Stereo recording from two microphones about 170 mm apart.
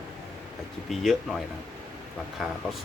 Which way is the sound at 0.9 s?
Centre (ahead or behind).